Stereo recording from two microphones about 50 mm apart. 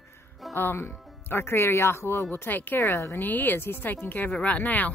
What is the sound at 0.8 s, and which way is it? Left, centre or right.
Speech, left.